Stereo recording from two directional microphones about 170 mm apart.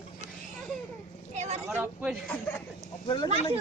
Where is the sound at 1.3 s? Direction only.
40° right (ahead or behind).